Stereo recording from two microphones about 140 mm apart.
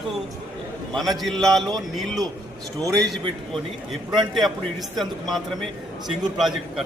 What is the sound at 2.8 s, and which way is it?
Speech, 25° right (ahead or behind).